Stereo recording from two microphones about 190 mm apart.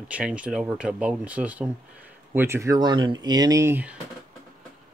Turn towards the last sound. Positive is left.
turn(degrees=-10)  # may be behind; listen again after turning